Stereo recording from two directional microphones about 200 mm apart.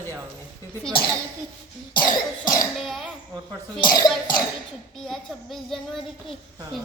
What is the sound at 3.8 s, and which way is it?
Speech, 20° left (ahead or behind).